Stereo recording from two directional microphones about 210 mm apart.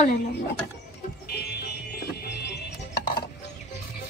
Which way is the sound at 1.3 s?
50° left (ahead or behind).